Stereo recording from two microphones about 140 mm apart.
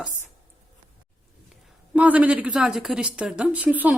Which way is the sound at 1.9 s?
10° right (ahead or behind).